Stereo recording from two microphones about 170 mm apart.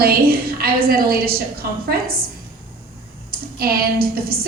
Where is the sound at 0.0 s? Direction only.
65° right (ahead or behind).